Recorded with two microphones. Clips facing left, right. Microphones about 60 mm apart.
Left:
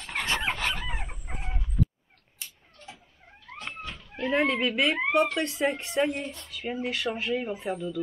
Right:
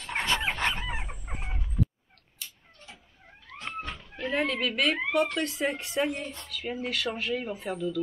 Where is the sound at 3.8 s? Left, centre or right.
Right.